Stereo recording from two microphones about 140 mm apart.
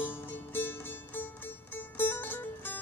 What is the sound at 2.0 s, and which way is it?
Music, 15° left (ahead or behind).